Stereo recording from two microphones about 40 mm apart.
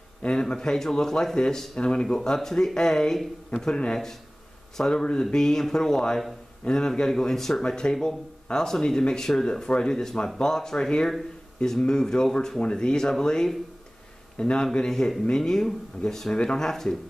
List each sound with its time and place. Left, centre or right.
0.2 s speech: left
2.0 s speech: centre
7.6 s speech: centre